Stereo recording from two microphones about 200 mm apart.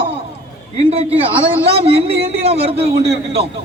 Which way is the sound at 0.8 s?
30° right (ahead or behind).